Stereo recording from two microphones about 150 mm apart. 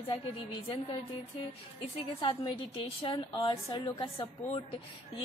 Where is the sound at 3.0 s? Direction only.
35° left (ahead or behind).